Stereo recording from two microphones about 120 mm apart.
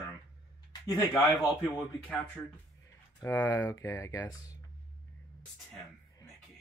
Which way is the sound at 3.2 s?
20° left (ahead or behind).